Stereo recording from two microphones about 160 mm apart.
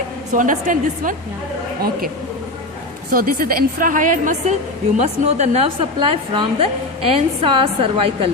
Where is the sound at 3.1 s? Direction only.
65° right (ahead or behind); by 5.9 s 45° right (ahead or behind).